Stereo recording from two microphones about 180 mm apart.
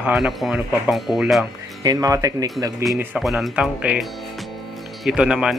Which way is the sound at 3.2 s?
Centre (ahead or behind).